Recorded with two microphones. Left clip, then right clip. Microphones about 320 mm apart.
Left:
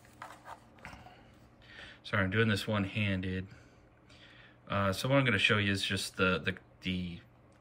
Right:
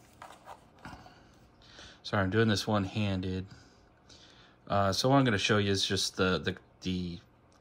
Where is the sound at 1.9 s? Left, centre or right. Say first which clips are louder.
Right 1 dB; centre.